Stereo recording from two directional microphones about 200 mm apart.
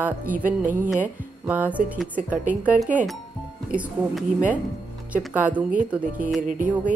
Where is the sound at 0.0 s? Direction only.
10° right (ahead or behind).